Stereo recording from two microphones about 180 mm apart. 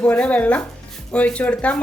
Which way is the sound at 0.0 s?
5° left (ahead or behind).